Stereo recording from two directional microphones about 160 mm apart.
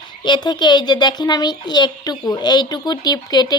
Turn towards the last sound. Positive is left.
turn(degrees=25)  # may be behind; listen again after turning